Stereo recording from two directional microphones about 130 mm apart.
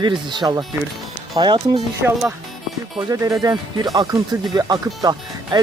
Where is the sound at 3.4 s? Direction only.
30° right (ahead or behind).